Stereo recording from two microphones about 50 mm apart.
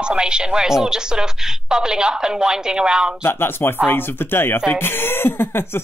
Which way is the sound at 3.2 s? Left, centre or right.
Left.